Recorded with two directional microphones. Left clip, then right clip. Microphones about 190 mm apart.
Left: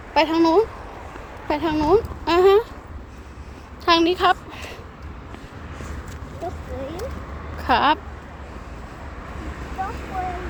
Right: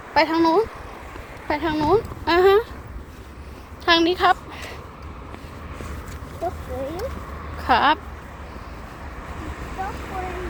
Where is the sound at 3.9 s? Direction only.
10° left (ahead or behind).